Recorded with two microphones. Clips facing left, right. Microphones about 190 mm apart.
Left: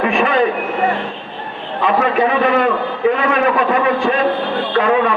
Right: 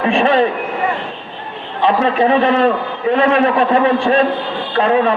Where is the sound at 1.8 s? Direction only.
30° right (ahead or behind).